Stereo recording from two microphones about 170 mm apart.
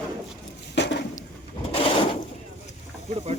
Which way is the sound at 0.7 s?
90° left.